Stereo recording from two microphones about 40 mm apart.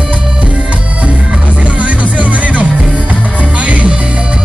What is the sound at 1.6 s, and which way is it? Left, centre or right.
Music, right.